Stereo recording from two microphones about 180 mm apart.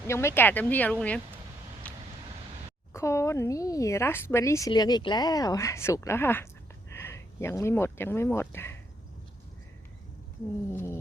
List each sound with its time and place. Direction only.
0.1 s a woman's voice: 15° left (ahead or behind)
1.8 s vehicle: 5° left (ahead or behind)
2.9 s a woman's voice: 15° left (ahead or behind)
10.7 s a woman's voice: 15° left (ahead or behind)